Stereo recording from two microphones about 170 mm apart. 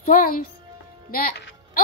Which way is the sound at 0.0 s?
50° left (ahead or behind).